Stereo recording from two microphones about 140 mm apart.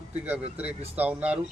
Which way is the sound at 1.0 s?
10° right (ahead or behind).